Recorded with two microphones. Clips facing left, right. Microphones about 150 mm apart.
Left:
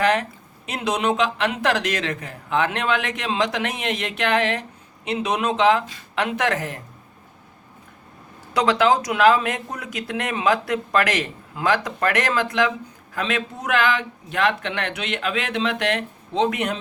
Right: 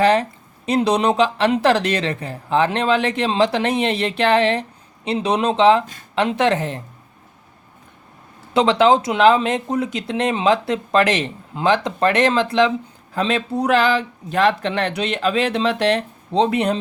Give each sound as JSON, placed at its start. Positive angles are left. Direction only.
{"t": 0.0, "sound": "speech", "side_deg": -30}
{"t": 8.5, "sound": "speech", "side_deg": -25}